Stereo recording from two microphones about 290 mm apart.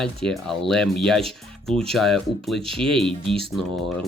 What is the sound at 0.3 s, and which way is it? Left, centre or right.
Speech, centre.